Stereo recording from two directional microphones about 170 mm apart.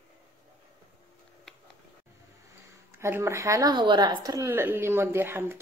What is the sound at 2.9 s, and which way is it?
A woman's voice, 15° right (ahead or behind).